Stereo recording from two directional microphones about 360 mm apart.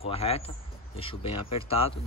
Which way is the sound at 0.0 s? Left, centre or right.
Centre.